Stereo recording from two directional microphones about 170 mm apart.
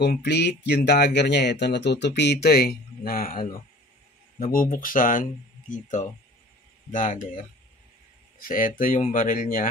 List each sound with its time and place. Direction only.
0.0 s speech: 80° left; by 7.2 s 50° left (ahead or behind)
8.4 s speech: 55° left (ahead or behind)